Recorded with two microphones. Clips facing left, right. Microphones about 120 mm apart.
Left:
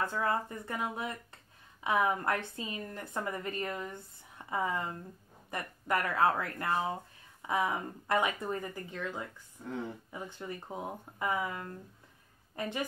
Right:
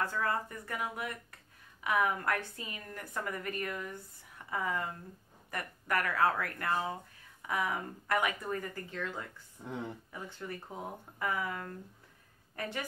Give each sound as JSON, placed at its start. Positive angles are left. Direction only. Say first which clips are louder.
{"t": 0.0, "sound": "a woman's voice", "louder": "left 2 dB", "side_deg": 20}
{"t": 9.6, "sound": "speech", "louder": "left 1 dB", "side_deg": -15}
{"t": 10.1, "sound": "a woman's voice", "louder": "left 1 dB", "side_deg": 20}